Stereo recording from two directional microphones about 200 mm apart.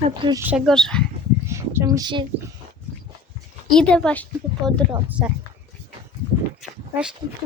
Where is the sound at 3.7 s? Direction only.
5° left (ahead or behind).